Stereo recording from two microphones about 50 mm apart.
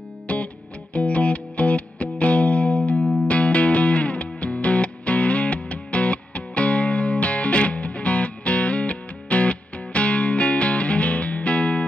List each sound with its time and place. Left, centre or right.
0.3 s music: left